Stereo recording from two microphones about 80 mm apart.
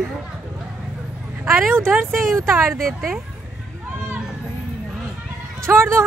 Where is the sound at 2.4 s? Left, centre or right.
Right.